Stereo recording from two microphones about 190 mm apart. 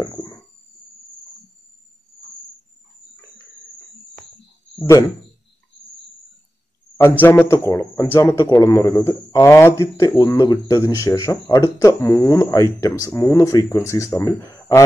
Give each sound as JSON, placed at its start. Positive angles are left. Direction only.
{"t": 0.0, "sound": "a sound", "side_deg": 20}
{"t": 4.7, "sound": "speech", "side_deg": 15}
{"t": 7.0, "sound": "speech", "side_deg": 10}